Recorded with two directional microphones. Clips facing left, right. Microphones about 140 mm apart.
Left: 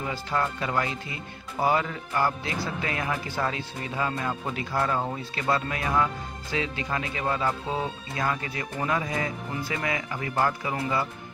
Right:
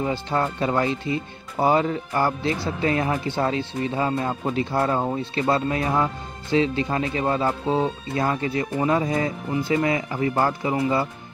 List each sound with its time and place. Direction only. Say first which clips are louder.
0.0 s speech: right 5 dB; 30° right (ahead or behind)